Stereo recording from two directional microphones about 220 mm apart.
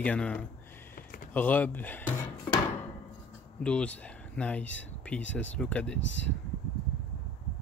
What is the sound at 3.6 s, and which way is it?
Speech, 5° left (ahead or behind).